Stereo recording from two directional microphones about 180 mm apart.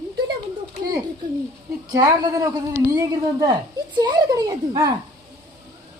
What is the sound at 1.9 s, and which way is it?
Speech, 20° right (ahead or behind).